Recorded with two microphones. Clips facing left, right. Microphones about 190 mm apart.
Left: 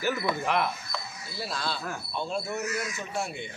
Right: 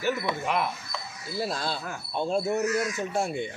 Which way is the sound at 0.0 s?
Centre (ahead or behind).